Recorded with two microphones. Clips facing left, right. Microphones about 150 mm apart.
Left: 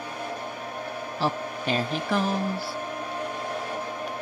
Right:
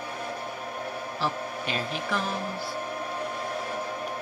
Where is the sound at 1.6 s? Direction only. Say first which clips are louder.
Left 5 dB; 40° left (ahead or behind).